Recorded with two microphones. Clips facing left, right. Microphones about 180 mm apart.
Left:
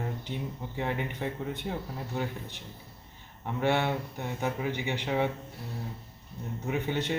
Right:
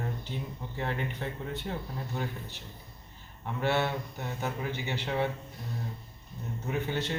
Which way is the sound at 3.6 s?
15° left (ahead or behind).